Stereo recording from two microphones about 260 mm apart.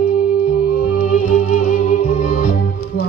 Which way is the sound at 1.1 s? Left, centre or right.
Left.